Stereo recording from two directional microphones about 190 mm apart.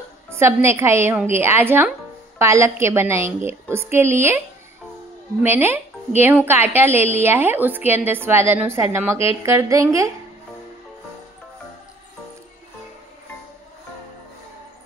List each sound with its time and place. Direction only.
0.4 s speech: 15° right (ahead or behind)
5.4 s speech: 10° right (ahead or behind)